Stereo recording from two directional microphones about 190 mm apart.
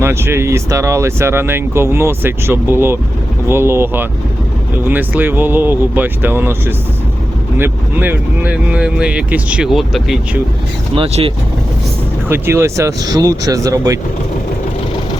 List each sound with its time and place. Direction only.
0.0 s speech: 15° right (ahead or behind)
10.9 s speech: 30° right (ahead or behind)
12.3 s speech: 10° right (ahead or behind)